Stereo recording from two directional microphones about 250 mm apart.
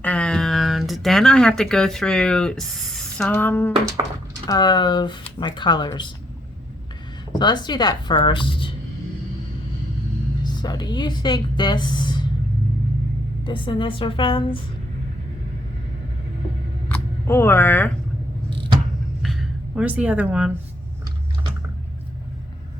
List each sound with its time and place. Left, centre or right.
0.0 s speech: centre
7.3 s speech: centre
10.4 s a woman's voice: centre
13.4 s a woman's voice: centre
16.9 s speech: centre
19.2 s a sound: centre